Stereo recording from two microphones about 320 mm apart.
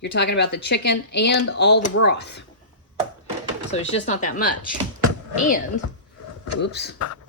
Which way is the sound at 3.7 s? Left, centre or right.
Left.